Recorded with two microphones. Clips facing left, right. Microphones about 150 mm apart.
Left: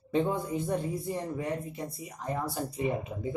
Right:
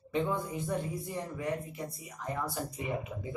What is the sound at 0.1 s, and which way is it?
Speech, 30° left (ahead or behind).